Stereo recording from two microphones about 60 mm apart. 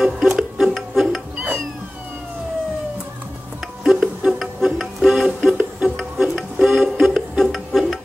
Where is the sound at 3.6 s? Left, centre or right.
Centre.